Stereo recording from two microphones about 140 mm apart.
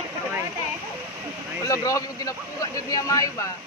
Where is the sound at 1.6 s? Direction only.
25° left (ahead or behind).